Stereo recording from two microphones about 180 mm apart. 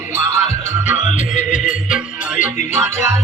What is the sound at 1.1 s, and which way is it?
Music, 45° left (ahead or behind).